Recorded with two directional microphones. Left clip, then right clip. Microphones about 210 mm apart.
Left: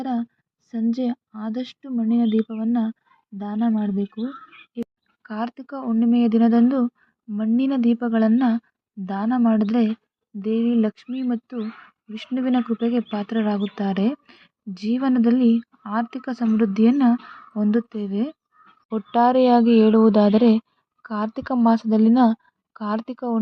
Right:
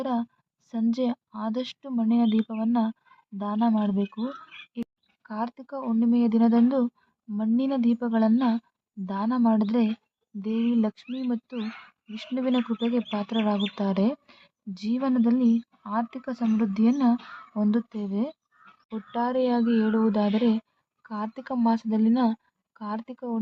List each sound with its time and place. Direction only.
0.0 s speech: centre (ahead or behind)
5.2 s speech: 10° left (ahead or behind)
18.9 s speech: 30° left (ahead or behind)